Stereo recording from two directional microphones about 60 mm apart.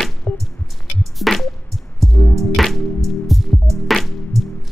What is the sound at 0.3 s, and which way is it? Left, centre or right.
Music, left.